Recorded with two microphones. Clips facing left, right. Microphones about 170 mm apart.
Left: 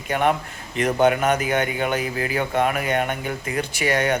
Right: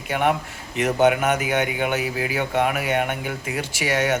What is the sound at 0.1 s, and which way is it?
A man's voice, 10° right (ahead or behind).